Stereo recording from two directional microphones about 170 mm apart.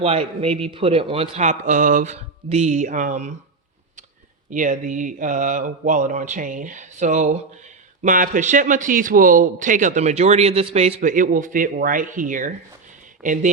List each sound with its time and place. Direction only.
0.0 s a man's voice: 35° right (ahead or behind)
4.4 s a man's voice: 50° right (ahead or behind)